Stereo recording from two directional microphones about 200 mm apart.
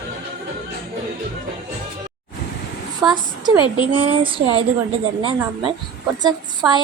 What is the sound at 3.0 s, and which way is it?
A woman's voice, 20° right (ahead or behind).